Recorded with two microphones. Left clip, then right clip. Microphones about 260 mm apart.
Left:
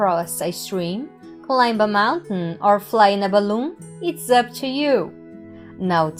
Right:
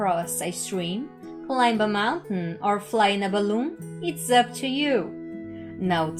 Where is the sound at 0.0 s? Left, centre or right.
Left.